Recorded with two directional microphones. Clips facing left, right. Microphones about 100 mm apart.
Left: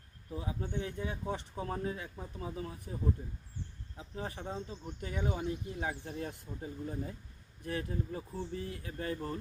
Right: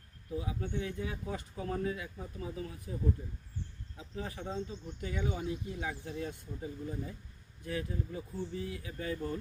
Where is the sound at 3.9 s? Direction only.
35° left (ahead or behind).